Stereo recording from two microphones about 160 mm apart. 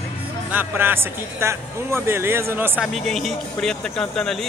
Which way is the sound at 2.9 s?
Centre (ahead or behind).